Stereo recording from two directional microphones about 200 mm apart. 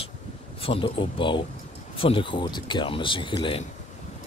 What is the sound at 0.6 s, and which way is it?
Speech, 30° left (ahead or behind).